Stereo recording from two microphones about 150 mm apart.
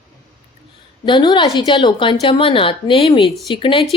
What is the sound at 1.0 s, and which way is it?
Speech, 30° left (ahead or behind).